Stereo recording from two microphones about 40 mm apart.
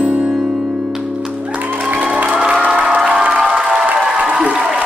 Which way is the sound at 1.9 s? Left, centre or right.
Right.